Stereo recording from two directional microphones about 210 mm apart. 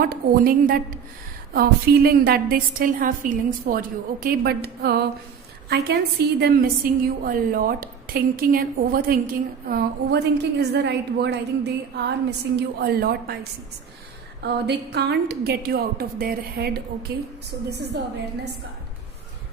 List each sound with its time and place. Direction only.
0.0 s a woman's voice: 45° right (ahead or behind)
14.4 s a woman's voice: 50° right (ahead or behind)